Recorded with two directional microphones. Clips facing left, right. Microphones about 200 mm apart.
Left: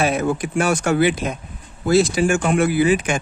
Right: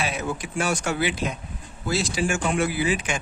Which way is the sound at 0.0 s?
50° left (ahead or behind).